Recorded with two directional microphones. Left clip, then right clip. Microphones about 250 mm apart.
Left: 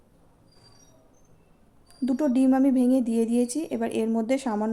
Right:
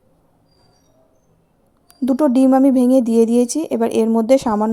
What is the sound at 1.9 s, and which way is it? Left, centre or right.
Speech, right.